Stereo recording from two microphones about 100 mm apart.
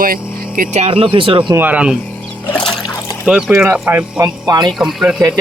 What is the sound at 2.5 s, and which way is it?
Trickle, 5° left (ahead or behind).